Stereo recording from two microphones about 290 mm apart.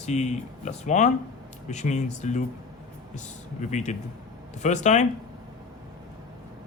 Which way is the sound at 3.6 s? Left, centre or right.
Left.